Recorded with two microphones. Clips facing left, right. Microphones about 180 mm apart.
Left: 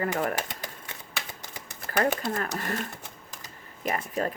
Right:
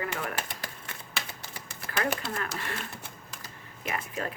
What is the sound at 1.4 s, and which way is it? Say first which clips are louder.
Typewriter: left 1 dB; 20° left (ahead or behind).